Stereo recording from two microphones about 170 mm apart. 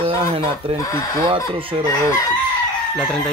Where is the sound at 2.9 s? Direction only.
5° left (ahead or behind).